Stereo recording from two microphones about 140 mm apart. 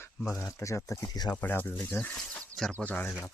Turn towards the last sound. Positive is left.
turn(degrees=10)  # may be behind; listen again after turning